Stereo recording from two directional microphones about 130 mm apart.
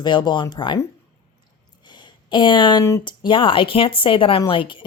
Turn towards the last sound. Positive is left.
turn(degrees=40)  # may be behind; listen again after turning